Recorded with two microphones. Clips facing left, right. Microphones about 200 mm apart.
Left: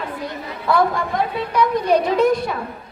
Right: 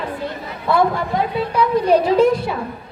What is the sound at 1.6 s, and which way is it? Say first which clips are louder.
Speech: right 2 dB; 30° right (ahead or behind).